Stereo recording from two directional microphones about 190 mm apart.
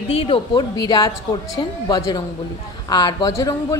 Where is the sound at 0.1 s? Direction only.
30° left (ahead or behind).